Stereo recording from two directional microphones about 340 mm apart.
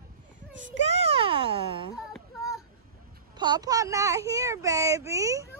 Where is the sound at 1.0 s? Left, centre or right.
Centre.